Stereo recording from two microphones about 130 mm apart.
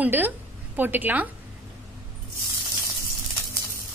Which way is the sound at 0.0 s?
15° right (ahead or behind).